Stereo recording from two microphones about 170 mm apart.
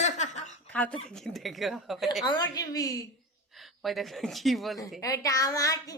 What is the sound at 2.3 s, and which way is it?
Speech, 20° left (ahead or behind).